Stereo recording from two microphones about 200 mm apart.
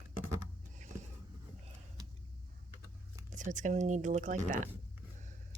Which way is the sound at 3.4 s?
40° right (ahead or behind).